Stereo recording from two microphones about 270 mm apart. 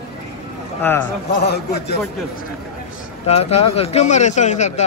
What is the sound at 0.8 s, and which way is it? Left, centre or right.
Speech, centre.